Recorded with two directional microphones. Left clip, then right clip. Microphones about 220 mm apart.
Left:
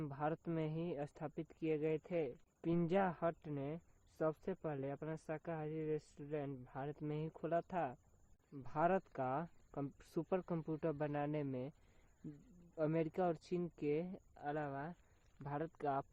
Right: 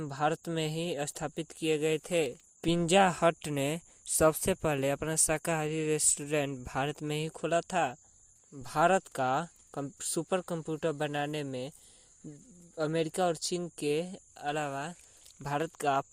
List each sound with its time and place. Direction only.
0.0 s speech: 30° right (ahead or behind); by 6.9 s 45° right (ahead or behind)
6.9 s speech: 35° right (ahead or behind)
12.7 s speech: 20° right (ahead or behind)